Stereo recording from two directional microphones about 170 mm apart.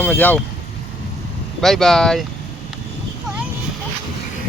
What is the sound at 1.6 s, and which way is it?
Speech, centre (ahead or behind).